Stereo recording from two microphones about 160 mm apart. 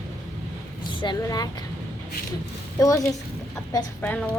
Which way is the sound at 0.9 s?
30° left (ahead or behind).